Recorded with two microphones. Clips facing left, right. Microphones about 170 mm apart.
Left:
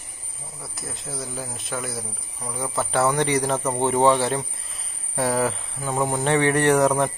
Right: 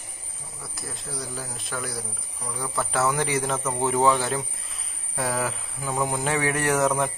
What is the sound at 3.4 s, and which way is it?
Speech, 30° left (ahead or behind).